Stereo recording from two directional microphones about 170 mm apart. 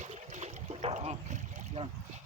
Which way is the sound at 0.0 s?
40° right (ahead or behind).